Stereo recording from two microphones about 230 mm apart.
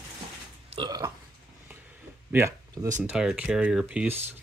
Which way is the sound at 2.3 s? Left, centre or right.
Centre.